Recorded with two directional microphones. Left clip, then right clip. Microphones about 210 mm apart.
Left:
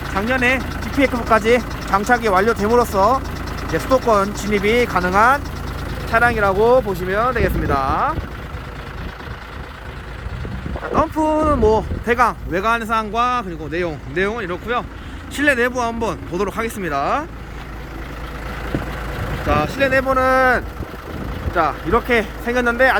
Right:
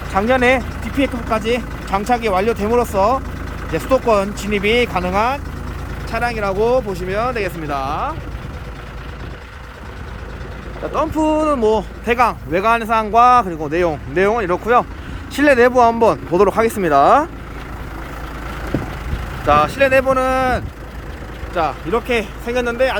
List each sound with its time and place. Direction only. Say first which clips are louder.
0.1 s speech: right 4 dB; 15° right (ahead or behind)
0.9 s speech: left 3 dB; 5° left (ahead or behind)
10.9 s speech: even; centre (ahead or behind); by 17.2 s 25° right (ahead or behind)
19.5 s speech: right 5 dB; 15° right (ahead or behind)